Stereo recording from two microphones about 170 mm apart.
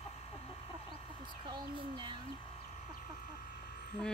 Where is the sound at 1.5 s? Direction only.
25° right (ahead or behind).